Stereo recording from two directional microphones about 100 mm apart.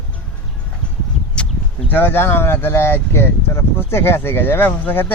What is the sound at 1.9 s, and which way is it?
Speech, 20° left (ahead or behind).